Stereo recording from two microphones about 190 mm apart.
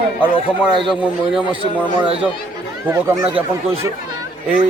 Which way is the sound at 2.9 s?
15° right (ahead or behind).